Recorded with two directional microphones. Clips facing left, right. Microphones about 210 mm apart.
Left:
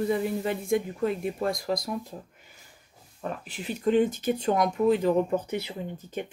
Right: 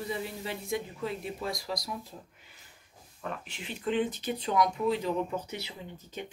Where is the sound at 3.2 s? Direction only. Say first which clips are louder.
Left 4 dB; 40° left (ahead or behind).